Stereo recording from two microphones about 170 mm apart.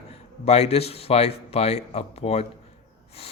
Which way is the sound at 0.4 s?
40° left (ahead or behind).